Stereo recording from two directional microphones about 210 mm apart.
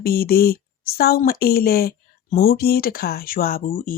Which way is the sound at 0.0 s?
45° left (ahead or behind).